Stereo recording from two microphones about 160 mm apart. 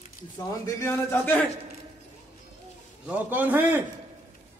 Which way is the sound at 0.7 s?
15° left (ahead or behind).